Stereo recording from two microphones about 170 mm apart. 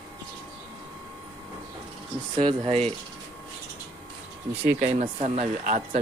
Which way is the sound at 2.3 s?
35° right (ahead or behind).